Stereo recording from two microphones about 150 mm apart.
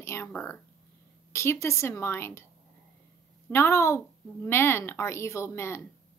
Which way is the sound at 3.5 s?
15° left (ahead or behind).